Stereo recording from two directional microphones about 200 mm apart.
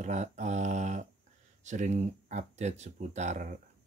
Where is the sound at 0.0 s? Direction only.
35° right (ahead or behind).